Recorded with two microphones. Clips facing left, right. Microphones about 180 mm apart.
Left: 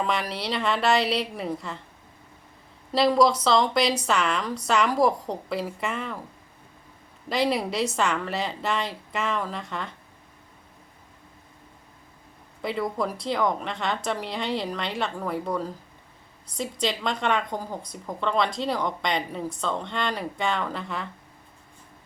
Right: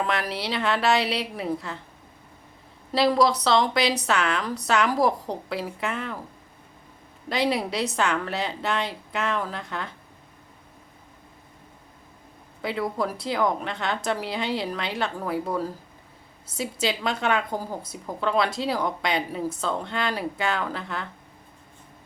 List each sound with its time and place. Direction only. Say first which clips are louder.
0.0 s a woman's voice: even; centre (ahead or behind)
2.9 s a woman's voice: left 1 dB; centre (ahead or behind)
7.3 s a woman's voice: even; centre (ahead or behind)
12.6 s a woman's voice: even; centre (ahead or behind)